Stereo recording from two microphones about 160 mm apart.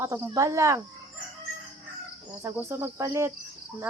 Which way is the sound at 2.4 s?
15° right (ahead or behind).